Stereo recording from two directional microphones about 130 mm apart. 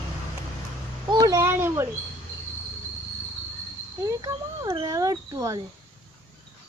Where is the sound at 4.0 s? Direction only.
25° right (ahead or behind).